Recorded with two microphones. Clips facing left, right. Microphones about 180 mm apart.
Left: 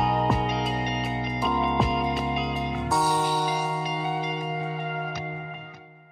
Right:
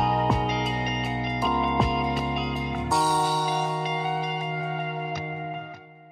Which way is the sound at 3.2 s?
10° left (ahead or behind).